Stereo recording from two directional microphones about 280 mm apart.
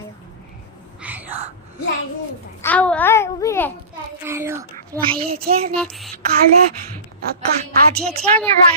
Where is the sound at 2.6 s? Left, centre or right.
Centre.